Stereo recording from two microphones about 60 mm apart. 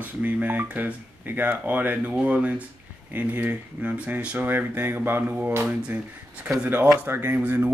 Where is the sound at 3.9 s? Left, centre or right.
Centre.